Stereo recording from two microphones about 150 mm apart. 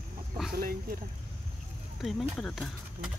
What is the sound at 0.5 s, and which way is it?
Speech, 75° right (ahead or behind).